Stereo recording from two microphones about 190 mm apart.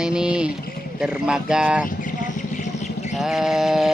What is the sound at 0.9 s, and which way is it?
Speech, 5° right (ahead or behind).